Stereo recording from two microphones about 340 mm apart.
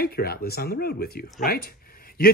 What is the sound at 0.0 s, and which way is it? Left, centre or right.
Speech, left.